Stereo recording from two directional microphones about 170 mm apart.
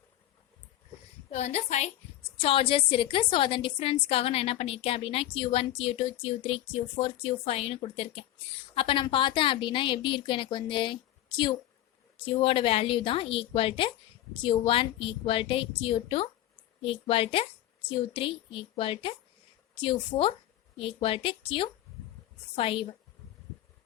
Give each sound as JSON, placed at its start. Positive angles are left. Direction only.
{"t": 1.3, "sound": "a woman's voice", "side_deg": 40}